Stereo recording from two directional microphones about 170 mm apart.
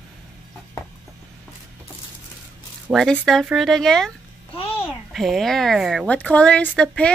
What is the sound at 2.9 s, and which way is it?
Speech, 10° right (ahead or behind).